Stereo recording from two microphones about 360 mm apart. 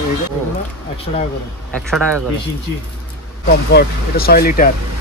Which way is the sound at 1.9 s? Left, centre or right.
Centre.